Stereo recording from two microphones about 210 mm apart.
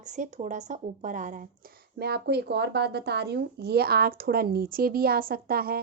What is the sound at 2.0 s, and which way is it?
Speech, 50° right (ahead or behind).